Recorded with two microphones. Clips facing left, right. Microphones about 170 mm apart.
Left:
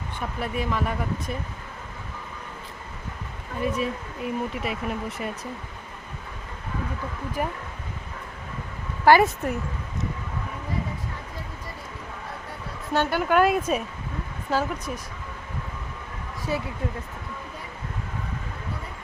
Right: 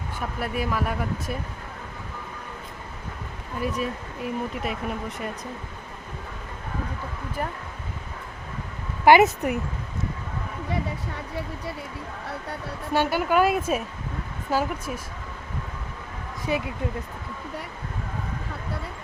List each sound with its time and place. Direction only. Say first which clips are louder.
0.3 s speech: even; 5° right (ahead or behind)
3.6 s speech: left 2 dB; centre (ahead or behind)
7.4 s speech: left 2 dB; 10° left (ahead or behind)
9.0 s speech: right 1 dB; 20° right (ahead or behind)
12.9 s speech: even; 10° right (ahead or behind)
16.5 s speech: right 2 dB; 20° right (ahead or behind)